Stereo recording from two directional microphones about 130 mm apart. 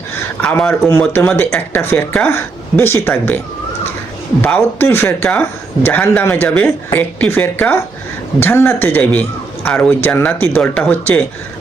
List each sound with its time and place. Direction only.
0.4 s speech: 10° left (ahead or behind)